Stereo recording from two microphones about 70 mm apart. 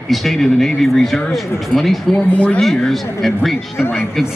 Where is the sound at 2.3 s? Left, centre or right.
Centre.